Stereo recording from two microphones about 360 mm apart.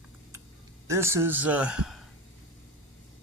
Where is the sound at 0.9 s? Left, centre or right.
Centre.